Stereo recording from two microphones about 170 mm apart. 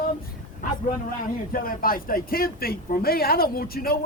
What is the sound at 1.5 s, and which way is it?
Speech, 55° left (ahead or behind).